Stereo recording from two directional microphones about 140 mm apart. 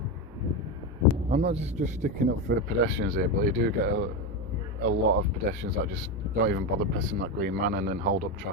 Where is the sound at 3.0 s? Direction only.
90° right.